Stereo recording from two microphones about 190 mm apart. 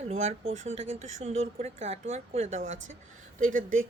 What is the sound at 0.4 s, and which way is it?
Speech, 90° right.